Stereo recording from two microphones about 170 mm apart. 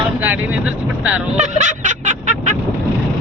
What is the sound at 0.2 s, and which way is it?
Speech, 10° right (ahead or behind).